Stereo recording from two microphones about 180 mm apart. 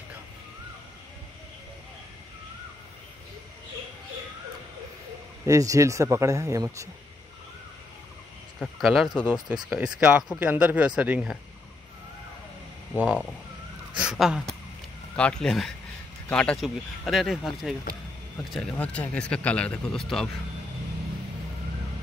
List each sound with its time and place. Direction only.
5.4 s speech: 15° right (ahead or behind)
8.5 s speech: centre (ahead or behind)
12.9 s speech: 5° right (ahead or behind)